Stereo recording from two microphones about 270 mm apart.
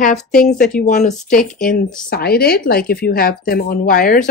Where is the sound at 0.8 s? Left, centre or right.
Left.